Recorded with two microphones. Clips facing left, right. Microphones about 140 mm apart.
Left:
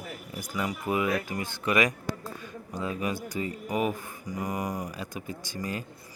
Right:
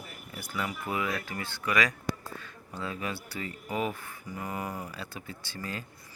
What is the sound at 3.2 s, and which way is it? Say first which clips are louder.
Speech: left 5 dB; 15° left (ahead or behind).